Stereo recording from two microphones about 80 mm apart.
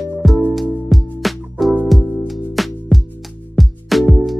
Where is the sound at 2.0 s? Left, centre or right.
Right.